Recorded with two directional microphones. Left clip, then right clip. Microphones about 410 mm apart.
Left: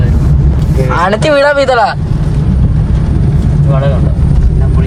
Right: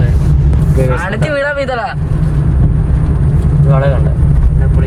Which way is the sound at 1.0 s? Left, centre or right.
Centre.